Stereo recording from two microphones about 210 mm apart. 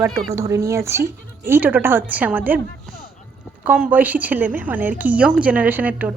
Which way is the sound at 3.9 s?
10° right (ahead or behind).